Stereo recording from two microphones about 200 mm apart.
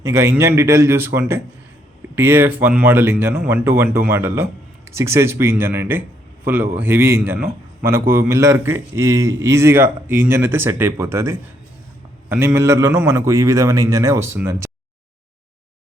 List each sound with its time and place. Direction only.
0.0 s a man's voice: 15° right (ahead or behind)